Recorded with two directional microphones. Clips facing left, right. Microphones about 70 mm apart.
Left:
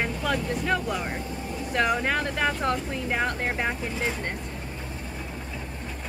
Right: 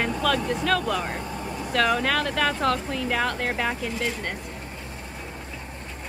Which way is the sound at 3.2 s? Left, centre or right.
Left.